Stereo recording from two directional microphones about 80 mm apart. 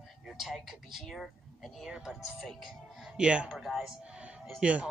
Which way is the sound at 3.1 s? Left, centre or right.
Centre.